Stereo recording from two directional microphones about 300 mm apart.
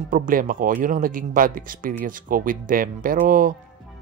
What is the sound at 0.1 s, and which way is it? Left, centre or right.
Speech, right.